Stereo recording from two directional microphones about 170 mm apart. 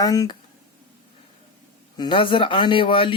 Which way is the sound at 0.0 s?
20° left (ahead or behind).